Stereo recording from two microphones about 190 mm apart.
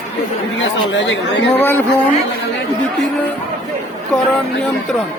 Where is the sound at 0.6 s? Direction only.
75° left (ahead or behind).